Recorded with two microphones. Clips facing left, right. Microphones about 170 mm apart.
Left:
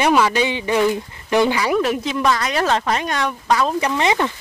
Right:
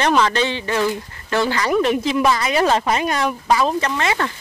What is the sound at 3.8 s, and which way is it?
Speech, 15° left (ahead or behind).